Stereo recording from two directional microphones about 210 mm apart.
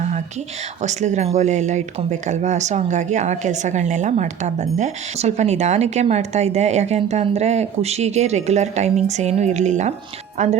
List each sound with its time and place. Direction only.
0.8 s speech: 35° right (ahead or behind)